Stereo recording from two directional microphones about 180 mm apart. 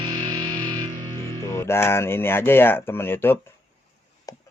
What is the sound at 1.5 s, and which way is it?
Speech, 15° left (ahead or behind).